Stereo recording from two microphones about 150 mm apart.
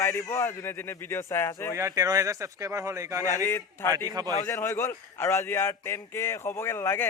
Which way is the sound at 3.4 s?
15° left (ahead or behind).